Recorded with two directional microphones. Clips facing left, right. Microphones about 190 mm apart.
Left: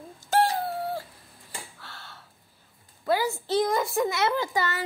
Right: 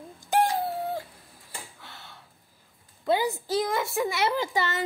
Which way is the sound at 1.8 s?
20° right (ahead or behind).